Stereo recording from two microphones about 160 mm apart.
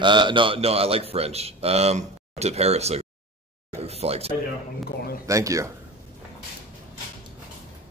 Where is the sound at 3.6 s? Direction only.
40° right (ahead or behind).